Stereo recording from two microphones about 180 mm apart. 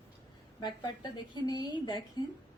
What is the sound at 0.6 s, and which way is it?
A woman's voice, 25° left (ahead or behind).